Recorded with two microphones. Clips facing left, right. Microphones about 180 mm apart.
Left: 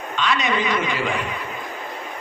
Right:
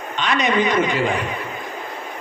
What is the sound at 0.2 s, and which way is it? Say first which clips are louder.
Speech: right 3 dB; 20° right (ahead or behind).